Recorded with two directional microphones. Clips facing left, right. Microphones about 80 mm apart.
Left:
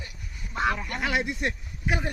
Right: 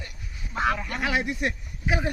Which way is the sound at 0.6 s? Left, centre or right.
Centre.